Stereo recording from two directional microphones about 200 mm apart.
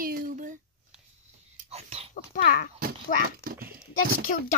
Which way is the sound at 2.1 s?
45° left (ahead or behind).